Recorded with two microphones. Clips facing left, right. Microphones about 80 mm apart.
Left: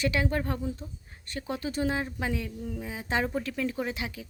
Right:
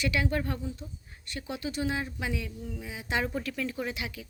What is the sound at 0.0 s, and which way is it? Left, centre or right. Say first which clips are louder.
Speech: left 1 dB; left.